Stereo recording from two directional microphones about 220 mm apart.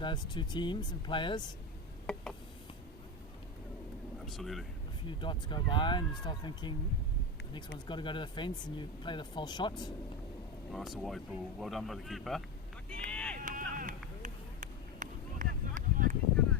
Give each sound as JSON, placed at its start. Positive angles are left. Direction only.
{"t": 0.0, "sound": "speech", "side_deg": 20}
{"t": 2.1, "sound": "a sound", "side_deg": 0}
{"t": 4.3, "sound": "speech", "side_deg": 0}
{"t": 5.0, "sound": "speech", "side_deg": 20}
{"t": 7.9, "sound": "speech", "side_deg": 20}
{"t": 10.7, "sound": "speech", "side_deg": 0}
{"t": 12.9, "sound": "vehicle", "side_deg": 5}
{"t": 13.3, "sound": "a sound", "side_deg": -35}